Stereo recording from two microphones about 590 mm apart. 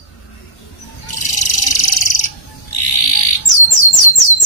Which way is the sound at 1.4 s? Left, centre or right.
Left.